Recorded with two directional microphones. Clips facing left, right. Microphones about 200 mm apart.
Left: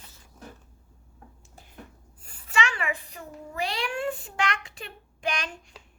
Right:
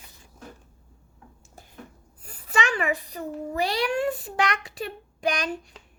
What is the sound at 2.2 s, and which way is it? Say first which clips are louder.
A child's voice: right 2 dB; 40° right (ahead or behind).